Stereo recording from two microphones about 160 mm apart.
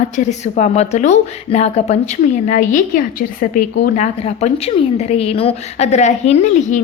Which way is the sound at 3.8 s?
45° left (ahead or behind).